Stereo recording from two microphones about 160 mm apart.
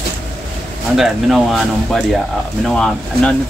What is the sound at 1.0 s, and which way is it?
Speech, centre (ahead or behind).